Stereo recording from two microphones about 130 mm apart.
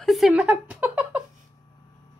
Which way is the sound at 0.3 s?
10° right (ahead or behind).